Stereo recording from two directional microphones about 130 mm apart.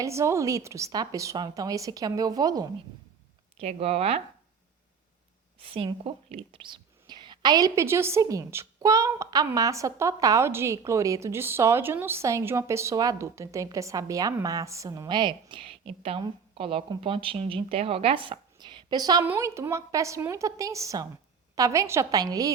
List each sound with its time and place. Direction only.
0.0 s a woman's voice: 20° right (ahead or behind)
3.6 s speech: 55° right (ahead or behind)
5.5 s a woman's voice: 45° right (ahead or behind)
19.2 s a woman's voice: 20° right (ahead or behind)